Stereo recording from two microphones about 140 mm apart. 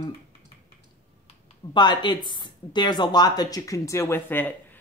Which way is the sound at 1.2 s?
40° left (ahead or behind).